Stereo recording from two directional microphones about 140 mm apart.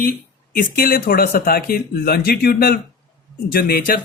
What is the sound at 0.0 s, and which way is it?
Speech, 90° left.